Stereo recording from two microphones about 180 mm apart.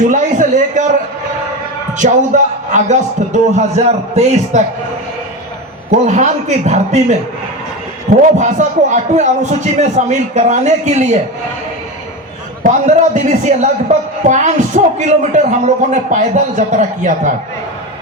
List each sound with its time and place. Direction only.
0.0 s a man's voice: 45° right (ahead or behind)
2.7 s speech: 40° right (ahead or behind)
5.9 s speech: 40° right (ahead or behind)
8.4 s speech: 40° right (ahead or behind)
12.6 s speech: 40° right (ahead or behind)